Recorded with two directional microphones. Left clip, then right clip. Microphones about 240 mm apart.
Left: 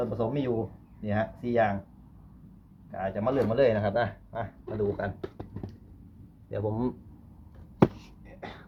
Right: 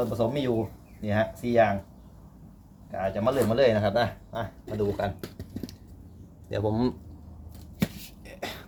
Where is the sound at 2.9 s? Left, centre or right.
Centre.